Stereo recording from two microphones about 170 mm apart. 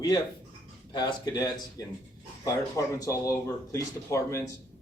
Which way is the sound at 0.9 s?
25° left (ahead or behind).